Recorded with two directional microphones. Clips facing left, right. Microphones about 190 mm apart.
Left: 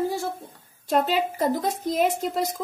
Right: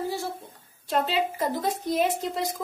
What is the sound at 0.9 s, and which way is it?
Speech, 45° left (ahead or behind).